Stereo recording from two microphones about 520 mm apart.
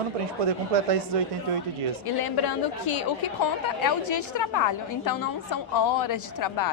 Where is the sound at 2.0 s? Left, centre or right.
Left.